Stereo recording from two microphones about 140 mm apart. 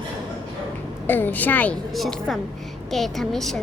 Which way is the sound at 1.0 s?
15° left (ahead or behind).